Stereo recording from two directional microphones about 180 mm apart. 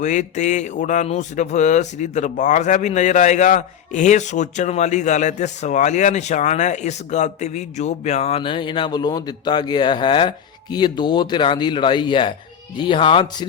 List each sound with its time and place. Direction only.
0.0 s speech: 45° left (ahead or behind)